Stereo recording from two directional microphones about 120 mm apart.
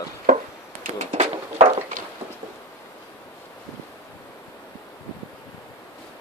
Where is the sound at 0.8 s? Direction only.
75° right (ahead or behind).